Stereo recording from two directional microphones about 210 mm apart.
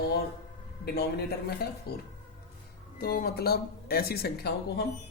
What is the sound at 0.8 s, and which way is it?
Speech, 50° left (ahead or behind).